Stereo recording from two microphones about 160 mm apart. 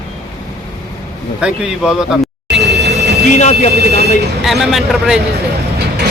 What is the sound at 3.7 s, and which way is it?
Speech, 90° right.